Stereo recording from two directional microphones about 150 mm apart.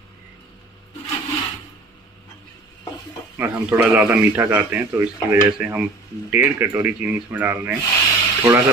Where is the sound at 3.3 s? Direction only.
15° right (ahead or behind).